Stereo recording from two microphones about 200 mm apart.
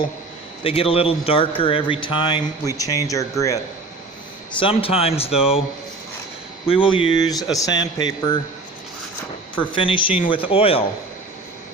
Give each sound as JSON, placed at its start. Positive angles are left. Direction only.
{"t": 0.6, "sound": "speech", "side_deg": 30}
{"t": 4.6, "sound": "speech", "side_deg": 30}
{"t": 5.3, "sound": "speech", "side_deg": -5}
{"t": 6.7, "sound": "speech", "side_deg": 25}
{"t": 9.6, "sound": "speech", "side_deg": 25}